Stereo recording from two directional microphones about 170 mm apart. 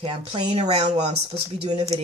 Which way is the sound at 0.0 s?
35° right (ahead or behind).